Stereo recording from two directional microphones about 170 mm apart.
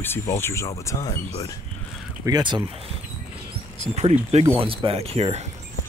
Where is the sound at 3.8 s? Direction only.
40° right (ahead or behind).